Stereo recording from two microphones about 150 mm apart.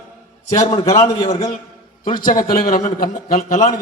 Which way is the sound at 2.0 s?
70° left (ahead or behind).